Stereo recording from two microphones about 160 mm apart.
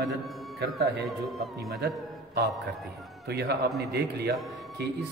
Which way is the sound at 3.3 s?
90° right.